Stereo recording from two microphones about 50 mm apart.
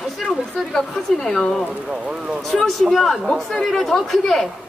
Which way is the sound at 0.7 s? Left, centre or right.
Centre.